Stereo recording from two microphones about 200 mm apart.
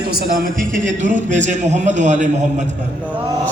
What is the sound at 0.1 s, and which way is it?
A man's voice, 45° right (ahead or behind).